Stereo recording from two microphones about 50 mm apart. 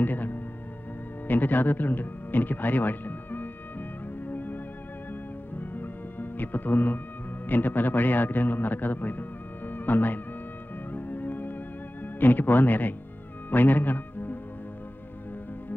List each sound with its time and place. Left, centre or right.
0.0 s music: left
1.2 s speech: left
4.3 s music: left
5.6 s music: left
7.4 s a man's voice: left
9.7 s music: left
12.2 s a man's voice: left
13.5 s music: left